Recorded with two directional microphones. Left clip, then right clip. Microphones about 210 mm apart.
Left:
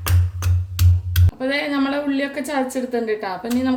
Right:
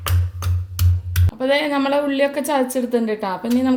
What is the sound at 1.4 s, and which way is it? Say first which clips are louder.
A woman's voice: right 3 dB; 30° right (ahead or behind).